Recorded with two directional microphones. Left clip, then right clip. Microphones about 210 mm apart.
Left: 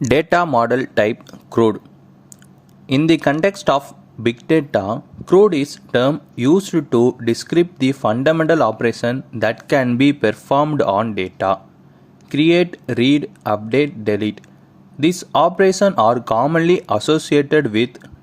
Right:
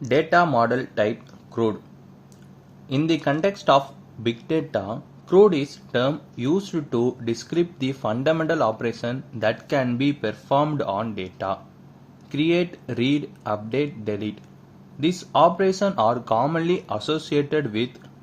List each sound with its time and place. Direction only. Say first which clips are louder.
0.0 s speech: left 4 dB; 45° left (ahead or behind)
2.8 s speech: left 8 dB; 35° left (ahead or behind)